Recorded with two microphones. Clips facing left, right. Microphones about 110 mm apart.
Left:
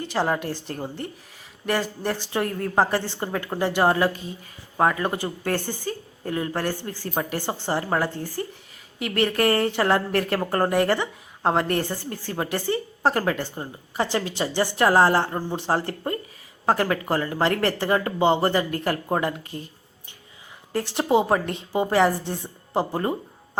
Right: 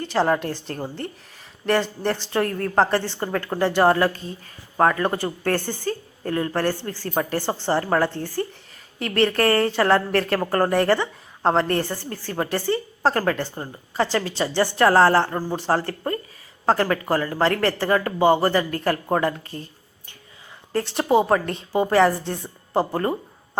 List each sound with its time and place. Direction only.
0.0 s a woman's voice: 15° left (ahead or behind)